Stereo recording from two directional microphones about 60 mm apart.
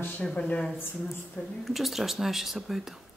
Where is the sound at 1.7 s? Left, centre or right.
Centre.